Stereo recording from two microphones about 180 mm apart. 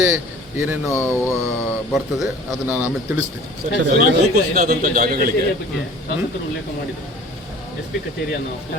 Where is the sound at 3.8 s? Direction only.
45° right (ahead or behind).